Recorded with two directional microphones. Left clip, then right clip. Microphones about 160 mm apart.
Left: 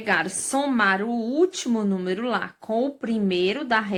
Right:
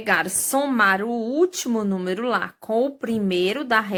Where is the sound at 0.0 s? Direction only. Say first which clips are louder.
Right 2 dB; 30° right (ahead or behind).